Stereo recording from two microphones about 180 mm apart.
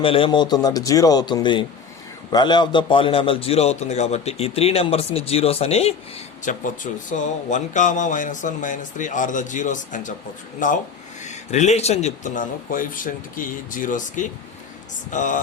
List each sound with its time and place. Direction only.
0.0 s a man's voice: 30° left (ahead or behind); by 15.4 s 45° left (ahead or behind)